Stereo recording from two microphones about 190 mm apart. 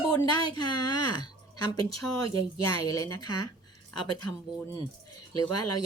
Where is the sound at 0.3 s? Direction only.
20° left (ahead or behind).